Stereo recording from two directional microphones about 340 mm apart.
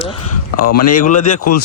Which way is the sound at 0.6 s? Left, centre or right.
Left.